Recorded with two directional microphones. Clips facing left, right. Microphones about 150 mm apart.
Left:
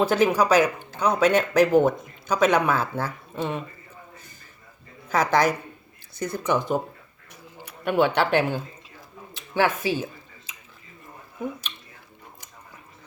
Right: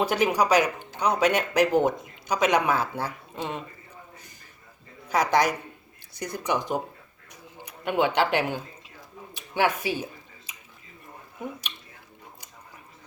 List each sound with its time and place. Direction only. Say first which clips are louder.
0.0 s a woman's voice: left 3 dB; 15° right (ahead or behind)
5.0 s speech: left 2 dB; 15° right (ahead or behind)